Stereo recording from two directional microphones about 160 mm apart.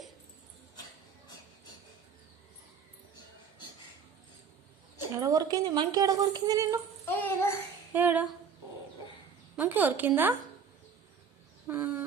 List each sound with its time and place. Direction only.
5.1 s speech: 25° right (ahead or behind)
7.0 s a sound: 15° left (ahead or behind)
7.9 s a woman's voice: 10° right (ahead or behind)
9.6 s a woman's voice: 10° right (ahead or behind)
11.7 s chicken: 10° right (ahead or behind)